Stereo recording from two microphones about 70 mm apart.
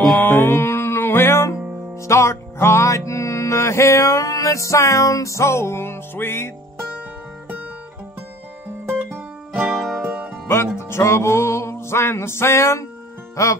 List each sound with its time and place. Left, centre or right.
0.2 s music: left
9.1 s music: right
9.8 s music: centre
10.0 s music: right
10.5 s music: left